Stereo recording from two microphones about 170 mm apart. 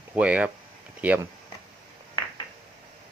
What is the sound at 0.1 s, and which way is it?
Speech, 10° right (ahead or behind).